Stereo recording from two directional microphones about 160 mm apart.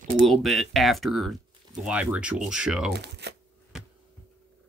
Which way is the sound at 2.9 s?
90° right.